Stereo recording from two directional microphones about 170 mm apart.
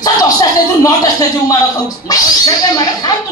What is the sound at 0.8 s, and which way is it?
Speech, 20° left (ahead or behind).